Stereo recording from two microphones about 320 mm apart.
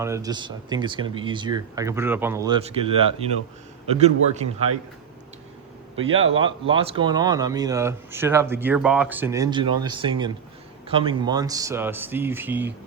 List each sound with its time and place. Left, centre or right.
0.0 s speech: centre
6.1 s speech: right
6.4 s speech: centre